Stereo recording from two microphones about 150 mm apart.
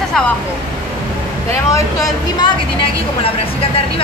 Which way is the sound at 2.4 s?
35° left (ahead or behind).